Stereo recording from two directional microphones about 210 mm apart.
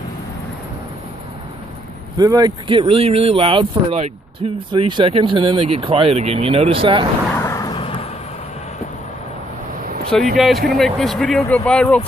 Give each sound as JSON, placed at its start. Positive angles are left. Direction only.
{"t": 2.1, "sound": "speech", "side_deg": -20}
{"t": 7.3, "sound": "a sound", "side_deg": 15}
{"t": 10.3, "sound": "speech", "side_deg": 0}